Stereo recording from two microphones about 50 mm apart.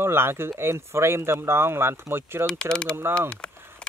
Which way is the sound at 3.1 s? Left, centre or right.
Left.